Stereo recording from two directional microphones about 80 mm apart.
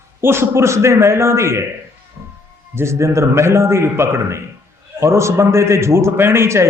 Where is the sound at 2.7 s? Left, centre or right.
Right.